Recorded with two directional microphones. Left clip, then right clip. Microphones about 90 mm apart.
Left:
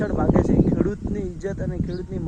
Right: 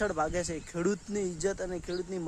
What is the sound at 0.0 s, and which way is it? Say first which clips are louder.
Speech: left 8 dB; 30° right (ahead or behind).